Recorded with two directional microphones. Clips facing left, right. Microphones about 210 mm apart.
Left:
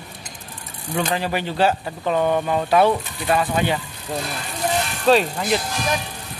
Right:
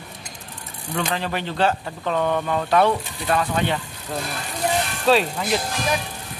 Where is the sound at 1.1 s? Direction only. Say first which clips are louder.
Left 3 dB; 10° left (ahead or behind).